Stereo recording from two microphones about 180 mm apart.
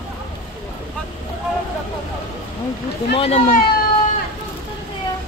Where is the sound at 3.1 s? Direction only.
35° left (ahead or behind).